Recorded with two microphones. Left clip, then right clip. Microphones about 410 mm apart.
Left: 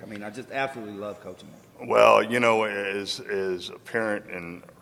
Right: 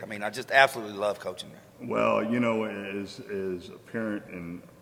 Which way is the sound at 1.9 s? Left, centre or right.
Left.